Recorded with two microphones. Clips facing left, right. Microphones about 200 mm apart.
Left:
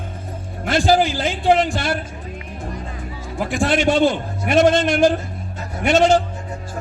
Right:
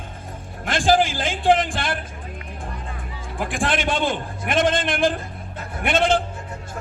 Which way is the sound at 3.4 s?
50° right (ahead or behind).